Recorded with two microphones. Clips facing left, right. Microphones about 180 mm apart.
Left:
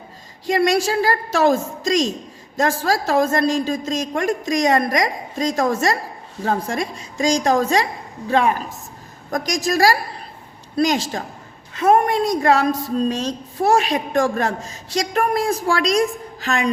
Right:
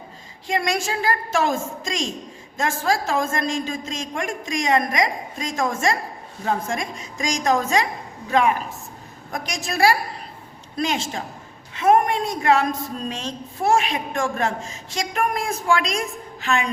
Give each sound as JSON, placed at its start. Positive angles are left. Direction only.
{"t": 0.4, "sound": "a woman's voice", "side_deg": 35}